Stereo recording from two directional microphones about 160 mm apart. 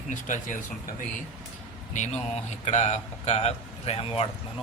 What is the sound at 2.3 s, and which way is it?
A man's voice, 45° left (ahead or behind).